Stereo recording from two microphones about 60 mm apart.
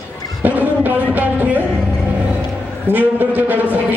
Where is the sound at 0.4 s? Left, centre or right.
Right.